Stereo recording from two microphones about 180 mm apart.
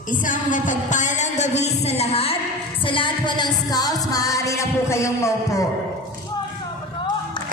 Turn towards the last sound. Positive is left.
turn(degrees=15)  # may be behind; listen again after turning